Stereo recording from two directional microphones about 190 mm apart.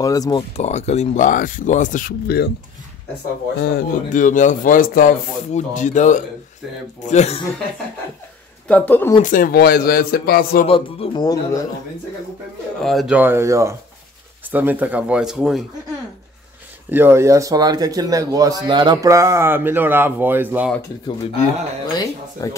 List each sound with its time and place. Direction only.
0.0 s speech: 20° left (ahead or behind)
0.4 s speech: 35° left (ahead or behind); by 2.5 s 55° left (ahead or behind)
3.7 s speech: 45° left (ahead or behind)
8.6 s speech: 10° left (ahead or behind)
9.2 s speech: 45° left (ahead or behind)
10.7 s speech: 25° left (ahead or behind)
12.8 s speech: centre (ahead or behind)
16.9 s speech: 10° right (ahead or behind)
21.9 s speech: 20° left (ahead or behind)